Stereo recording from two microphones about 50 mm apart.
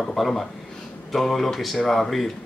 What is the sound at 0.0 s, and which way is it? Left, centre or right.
Speech, centre.